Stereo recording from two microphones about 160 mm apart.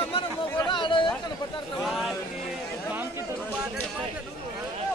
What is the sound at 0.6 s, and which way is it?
Chatter, 30° left (ahead or behind).